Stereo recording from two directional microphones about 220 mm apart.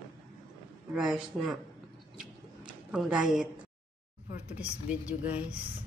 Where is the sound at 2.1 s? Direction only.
5° right (ahead or behind).